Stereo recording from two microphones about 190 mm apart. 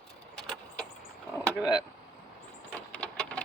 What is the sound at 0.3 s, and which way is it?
Vehicle, 5° left (ahead or behind).